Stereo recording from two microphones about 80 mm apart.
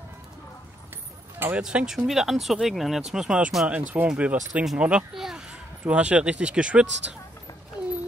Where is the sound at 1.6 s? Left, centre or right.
Centre.